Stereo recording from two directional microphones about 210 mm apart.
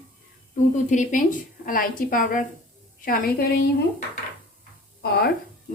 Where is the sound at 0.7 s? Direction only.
35° left (ahead or behind).